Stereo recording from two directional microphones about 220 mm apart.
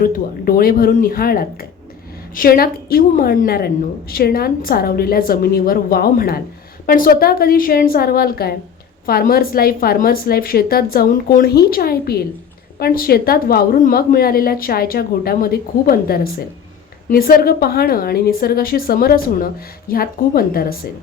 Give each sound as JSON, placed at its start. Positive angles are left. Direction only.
{"t": 0.0, "sound": "a woman's voice", "side_deg": 40}